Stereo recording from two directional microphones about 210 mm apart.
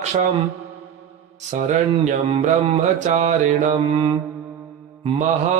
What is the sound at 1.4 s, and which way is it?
Mantra, 35° right (ahead or behind).